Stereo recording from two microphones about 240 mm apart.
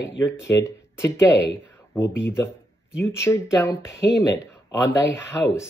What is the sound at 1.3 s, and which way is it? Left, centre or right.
Speech, left.